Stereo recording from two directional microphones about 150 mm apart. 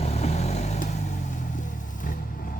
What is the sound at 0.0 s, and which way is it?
Vehicle, 45° left (ahead or behind).